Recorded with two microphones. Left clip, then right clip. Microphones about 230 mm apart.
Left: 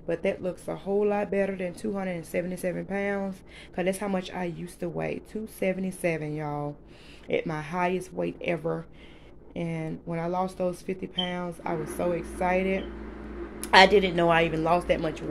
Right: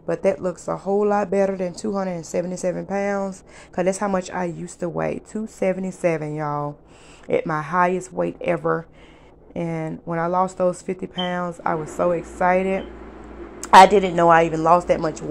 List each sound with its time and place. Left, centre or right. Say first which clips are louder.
0.0 s a woman's voice: right 7 dB; centre
1.4 s a woman's voice: right 7 dB; centre
1.9 s a woman's voice: right 6 dB; centre
2.5 s a woman's voice: right 7 dB; centre; by 5.7 s right
5.7 s a woman's voice: right 7 dB; centre